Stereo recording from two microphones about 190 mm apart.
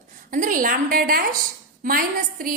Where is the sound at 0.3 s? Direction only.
45° right (ahead or behind).